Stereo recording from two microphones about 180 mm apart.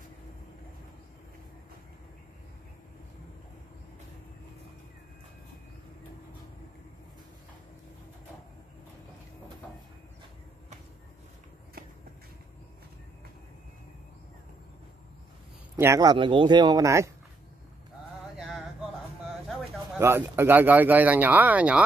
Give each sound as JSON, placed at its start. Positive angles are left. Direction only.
{"t": 15.7, "sound": "speech", "side_deg": -20}
{"t": 20.0, "sound": "speech", "side_deg": -15}